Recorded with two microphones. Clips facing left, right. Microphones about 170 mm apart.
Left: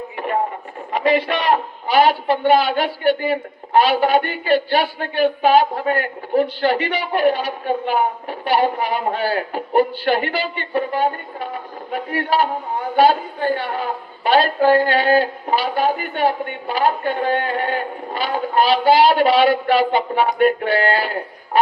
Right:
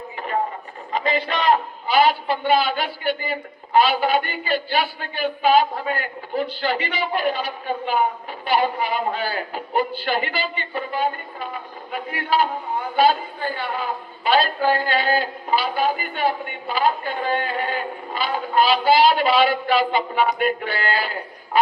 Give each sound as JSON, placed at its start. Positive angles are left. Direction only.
{"t": 2.0, "sound": "a woman's voice", "side_deg": 60}